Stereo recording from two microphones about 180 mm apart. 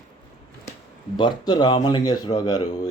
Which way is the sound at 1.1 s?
25° left (ahead or behind).